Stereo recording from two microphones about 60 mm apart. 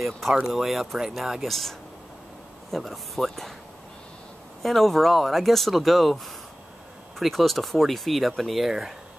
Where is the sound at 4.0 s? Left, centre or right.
Centre.